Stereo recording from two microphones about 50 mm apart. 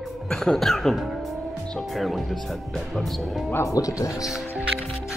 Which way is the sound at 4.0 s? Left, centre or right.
Left.